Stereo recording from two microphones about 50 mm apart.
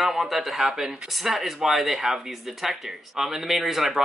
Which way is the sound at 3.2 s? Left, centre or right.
Centre.